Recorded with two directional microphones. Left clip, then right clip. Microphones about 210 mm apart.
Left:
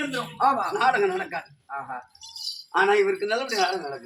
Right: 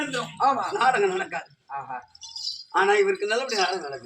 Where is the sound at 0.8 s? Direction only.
5° right (ahead or behind).